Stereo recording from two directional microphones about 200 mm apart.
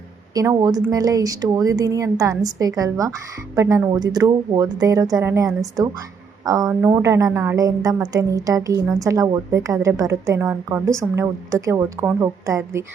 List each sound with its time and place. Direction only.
0.3 s a woman's voice: 20° right (ahead or behind)